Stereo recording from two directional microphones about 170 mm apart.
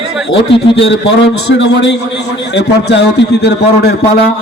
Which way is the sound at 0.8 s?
90° left.